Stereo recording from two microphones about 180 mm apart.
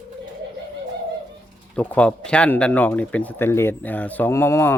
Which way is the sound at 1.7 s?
5° left (ahead or behind).